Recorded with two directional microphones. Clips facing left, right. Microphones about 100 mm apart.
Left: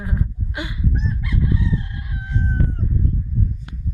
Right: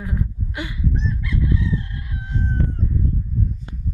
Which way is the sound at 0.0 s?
20° left (ahead or behind).